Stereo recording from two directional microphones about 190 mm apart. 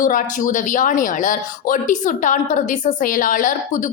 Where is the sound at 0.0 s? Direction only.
45° left (ahead or behind).